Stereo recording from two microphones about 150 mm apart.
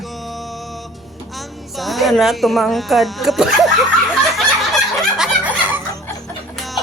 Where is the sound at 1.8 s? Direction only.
Centre (ahead or behind).